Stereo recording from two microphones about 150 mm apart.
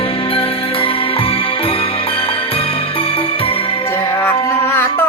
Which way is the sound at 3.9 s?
15° left (ahead or behind).